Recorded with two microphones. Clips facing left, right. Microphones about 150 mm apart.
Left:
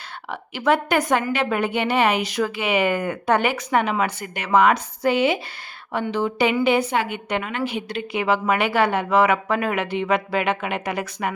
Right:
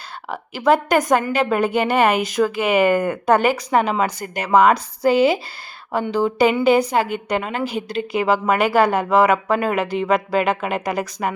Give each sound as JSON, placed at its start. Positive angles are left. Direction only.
{"t": 0.3, "sound": "a woman's voice", "side_deg": -40}